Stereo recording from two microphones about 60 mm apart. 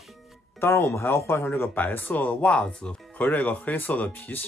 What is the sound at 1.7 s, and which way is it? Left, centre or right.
Speech, left.